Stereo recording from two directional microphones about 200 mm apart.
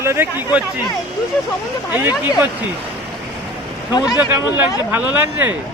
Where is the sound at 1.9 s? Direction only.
10° right (ahead or behind).